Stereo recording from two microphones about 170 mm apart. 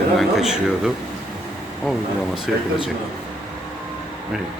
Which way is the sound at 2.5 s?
Centre (ahead or behind).